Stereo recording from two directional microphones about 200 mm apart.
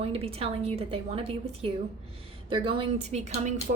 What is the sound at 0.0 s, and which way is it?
A woman's voice, 30° right (ahead or behind).